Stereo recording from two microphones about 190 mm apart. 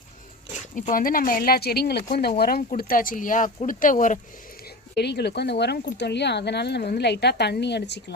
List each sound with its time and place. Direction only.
0.8 s speech: 45° left (ahead or behind)
4.9 s speech: 60° left (ahead or behind)